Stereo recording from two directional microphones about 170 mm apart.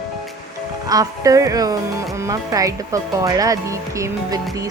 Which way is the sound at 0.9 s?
20° right (ahead or behind).